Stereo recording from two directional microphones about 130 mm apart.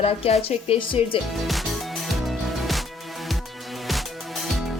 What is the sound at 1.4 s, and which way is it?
Music, centre (ahead or behind).